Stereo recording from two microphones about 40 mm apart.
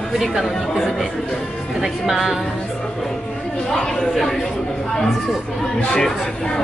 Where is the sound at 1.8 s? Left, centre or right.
Centre.